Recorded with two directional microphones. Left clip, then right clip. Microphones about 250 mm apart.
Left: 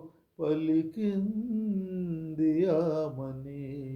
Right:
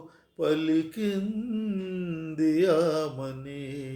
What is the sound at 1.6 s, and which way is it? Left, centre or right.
Mantra, centre.